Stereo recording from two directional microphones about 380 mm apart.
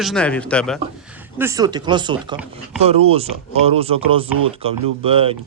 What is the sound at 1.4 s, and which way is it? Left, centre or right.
Speech, centre.